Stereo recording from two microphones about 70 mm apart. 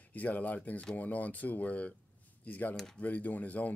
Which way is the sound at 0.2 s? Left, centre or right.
Left.